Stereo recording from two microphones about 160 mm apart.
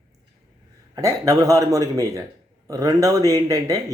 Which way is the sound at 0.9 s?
20° right (ahead or behind).